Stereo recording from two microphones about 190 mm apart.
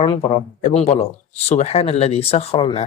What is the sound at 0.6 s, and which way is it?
Speech, 35° left (ahead or behind).